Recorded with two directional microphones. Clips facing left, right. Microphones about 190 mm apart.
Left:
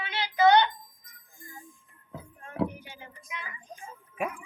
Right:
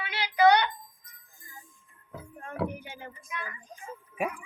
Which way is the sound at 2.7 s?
55° right (ahead or behind).